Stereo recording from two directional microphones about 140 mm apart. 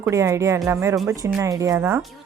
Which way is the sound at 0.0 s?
20° right (ahead or behind).